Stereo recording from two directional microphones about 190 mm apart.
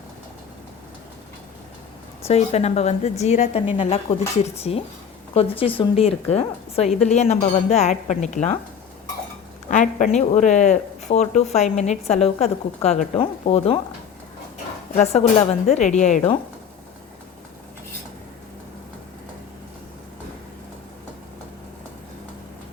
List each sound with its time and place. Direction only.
2.2 s speech: 35° left (ahead or behind)
9.6 s speech: 40° left (ahead or behind)
14.9 s speech: 35° left (ahead or behind)